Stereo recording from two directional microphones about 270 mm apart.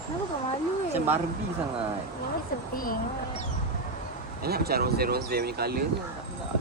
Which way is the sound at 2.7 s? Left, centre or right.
Left.